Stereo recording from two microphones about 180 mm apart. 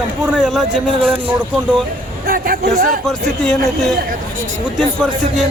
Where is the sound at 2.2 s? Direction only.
55° right (ahead or behind).